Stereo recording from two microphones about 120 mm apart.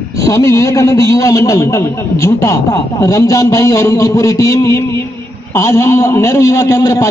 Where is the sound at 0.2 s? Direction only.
25° left (ahead or behind).